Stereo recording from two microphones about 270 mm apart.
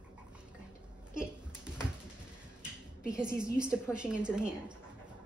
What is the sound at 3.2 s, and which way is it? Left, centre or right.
Speech, centre.